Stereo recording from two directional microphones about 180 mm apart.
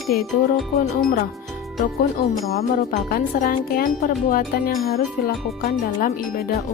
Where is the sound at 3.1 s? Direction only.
50° left (ahead or behind).